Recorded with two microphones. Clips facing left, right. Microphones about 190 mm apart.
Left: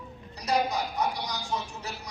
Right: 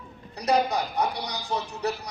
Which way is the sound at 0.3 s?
60° right (ahead or behind).